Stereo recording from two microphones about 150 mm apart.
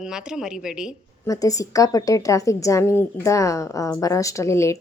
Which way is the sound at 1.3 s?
20° left (ahead or behind).